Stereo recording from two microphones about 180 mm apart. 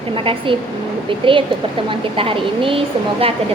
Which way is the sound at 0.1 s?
30° right (ahead or behind).